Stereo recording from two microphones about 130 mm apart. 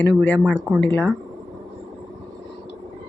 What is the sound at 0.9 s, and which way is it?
Speech, 15° left (ahead or behind).